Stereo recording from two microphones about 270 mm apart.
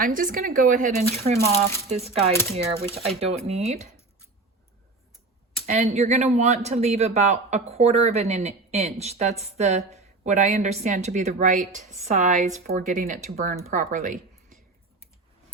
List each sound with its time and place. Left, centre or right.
0.0 s a woman's voice: right
5.6 s a woman's voice: right